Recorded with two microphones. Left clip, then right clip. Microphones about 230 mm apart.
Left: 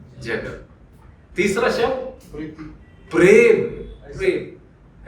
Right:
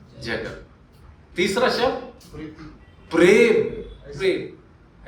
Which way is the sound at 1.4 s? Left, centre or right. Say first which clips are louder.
Left 1 dB; right.